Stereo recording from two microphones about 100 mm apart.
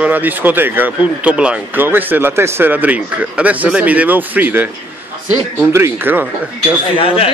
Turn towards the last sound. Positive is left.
turn(degrees=65)  # may be behind; listen again after turning